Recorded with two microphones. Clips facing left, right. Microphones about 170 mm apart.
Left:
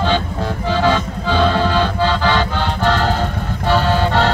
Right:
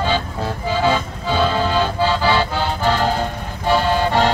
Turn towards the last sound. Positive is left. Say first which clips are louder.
# left 1 dB
turn(degrees=-10)  # may be behind; listen again after turning